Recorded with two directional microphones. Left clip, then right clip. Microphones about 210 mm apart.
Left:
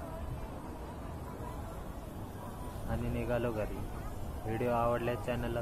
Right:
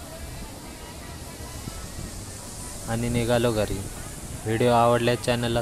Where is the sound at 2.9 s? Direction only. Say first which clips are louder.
Right 11 dB; 40° right (ahead or behind).